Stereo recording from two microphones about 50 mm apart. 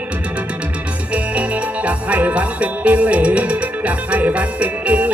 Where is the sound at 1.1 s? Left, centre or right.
Right.